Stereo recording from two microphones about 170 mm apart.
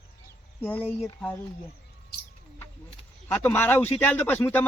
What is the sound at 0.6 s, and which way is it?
Speech, 10° left (ahead or behind).